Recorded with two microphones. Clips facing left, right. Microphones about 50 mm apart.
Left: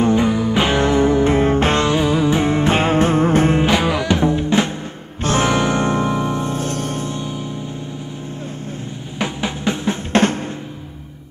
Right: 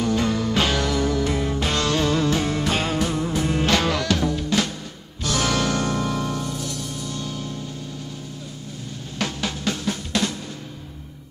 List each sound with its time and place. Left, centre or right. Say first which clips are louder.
0.0 s music: left 6 dB; left
1.9 s music: left 5 dB; centre; by 3.5 s left
3.5 s music: left 4 dB; centre; by 7.1 s left
7.1 s music: left 5 dB; left
9.2 s drum: left 5 dB; left
10.1 s drum: left 10 dB; left